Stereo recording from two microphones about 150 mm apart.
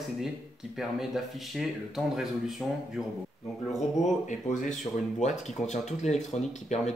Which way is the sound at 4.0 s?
55° left (ahead or behind).